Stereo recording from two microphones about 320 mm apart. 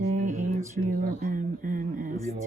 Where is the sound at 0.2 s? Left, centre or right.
Right.